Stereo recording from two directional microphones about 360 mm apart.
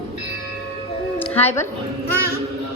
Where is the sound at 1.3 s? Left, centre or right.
Centre.